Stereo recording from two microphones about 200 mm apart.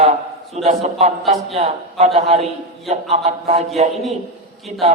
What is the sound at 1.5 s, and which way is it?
A man's voice, 30° right (ahead or behind).